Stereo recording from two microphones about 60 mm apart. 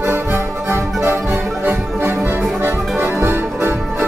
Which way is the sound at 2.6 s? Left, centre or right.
Right.